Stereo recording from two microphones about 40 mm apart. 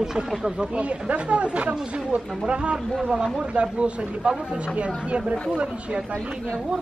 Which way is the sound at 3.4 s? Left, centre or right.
Right.